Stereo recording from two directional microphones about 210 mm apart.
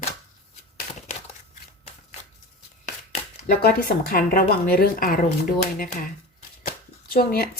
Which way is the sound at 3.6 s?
45° left (ahead or behind).